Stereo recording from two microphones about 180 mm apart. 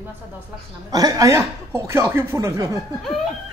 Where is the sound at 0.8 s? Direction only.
20° right (ahead or behind).